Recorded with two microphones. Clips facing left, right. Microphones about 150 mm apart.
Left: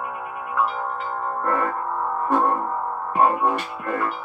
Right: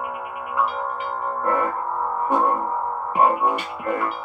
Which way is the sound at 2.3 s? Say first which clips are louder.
Even; 10° right (ahead or behind).